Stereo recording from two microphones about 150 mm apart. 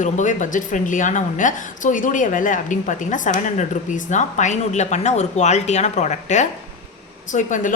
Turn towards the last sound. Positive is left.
turn(degrees=55)  # may be behind; listen again after turning